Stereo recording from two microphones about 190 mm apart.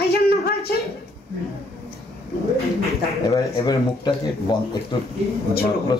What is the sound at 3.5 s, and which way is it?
Speech, 25° left (ahead or behind).